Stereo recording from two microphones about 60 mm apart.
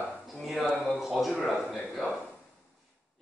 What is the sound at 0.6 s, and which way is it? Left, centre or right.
Speech, left.